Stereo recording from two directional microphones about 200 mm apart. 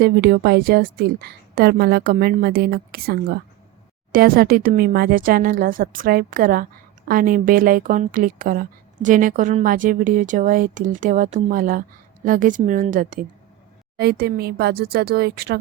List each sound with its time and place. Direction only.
0.0 s a woman's voice: 50° right (ahead or behind)
13.9 s speech: 50° right (ahead or behind)